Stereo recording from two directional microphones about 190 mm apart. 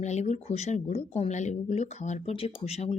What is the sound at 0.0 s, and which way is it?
Speech, 35° left (ahead or behind).